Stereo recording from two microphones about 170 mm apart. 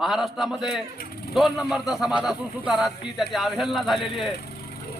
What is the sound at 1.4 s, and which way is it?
A man's voice, centre (ahead or behind).